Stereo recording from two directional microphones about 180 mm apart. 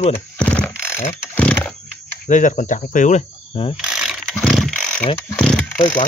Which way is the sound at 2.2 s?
45° left (ahead or behind).